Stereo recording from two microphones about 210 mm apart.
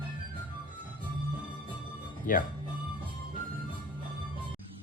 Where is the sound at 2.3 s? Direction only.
40° left (ahead or behind).